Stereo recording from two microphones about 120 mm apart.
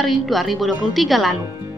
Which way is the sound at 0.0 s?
Centre (ahead or behind).